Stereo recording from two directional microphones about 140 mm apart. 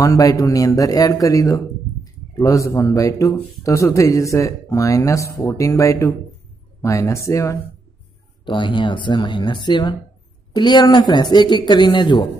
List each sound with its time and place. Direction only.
0.0 s speech: 25° left (ahead or behind)
8.5 s speech: 35° left (ahead or behind)